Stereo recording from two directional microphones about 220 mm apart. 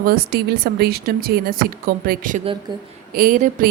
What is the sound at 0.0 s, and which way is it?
A woman's voice, 45° right (ahead or behind).